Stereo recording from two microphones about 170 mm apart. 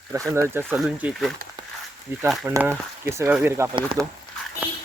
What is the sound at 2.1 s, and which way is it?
Speech, 15° right (ahead or behind).